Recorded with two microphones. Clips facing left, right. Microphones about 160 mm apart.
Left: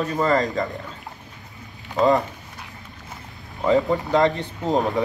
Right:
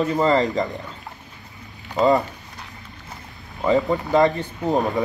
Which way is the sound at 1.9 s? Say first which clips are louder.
Right 1 dB; centre (ahead or behind).